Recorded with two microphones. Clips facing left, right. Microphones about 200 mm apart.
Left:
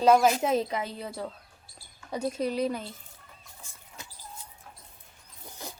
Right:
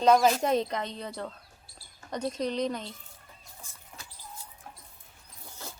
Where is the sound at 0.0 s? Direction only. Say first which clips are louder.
Left 1 dB; 5° left (ahead or behind).